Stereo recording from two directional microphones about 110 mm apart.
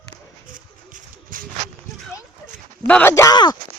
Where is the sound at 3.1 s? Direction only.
30° left (ahead or behind).